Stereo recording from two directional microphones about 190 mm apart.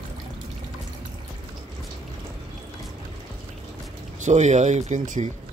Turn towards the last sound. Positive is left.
turn(degrees=-40)  # may be behind; listen again after turning